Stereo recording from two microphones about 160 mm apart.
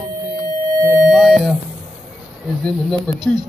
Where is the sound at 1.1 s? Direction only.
Centre (ahead or behind).